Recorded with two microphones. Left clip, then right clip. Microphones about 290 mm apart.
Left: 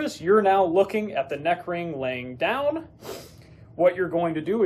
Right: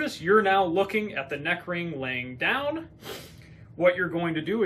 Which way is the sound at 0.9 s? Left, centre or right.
Centre.